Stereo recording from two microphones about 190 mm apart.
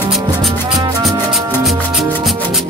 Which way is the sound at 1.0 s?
Centre (ahead or behind).